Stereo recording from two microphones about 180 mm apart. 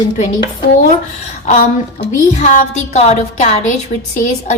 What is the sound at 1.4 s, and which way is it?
A woman's voice, 40° left (ahead or behind).